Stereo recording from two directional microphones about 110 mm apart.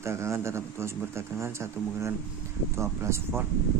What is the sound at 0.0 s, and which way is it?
Speech, 25° right (ahead or behind).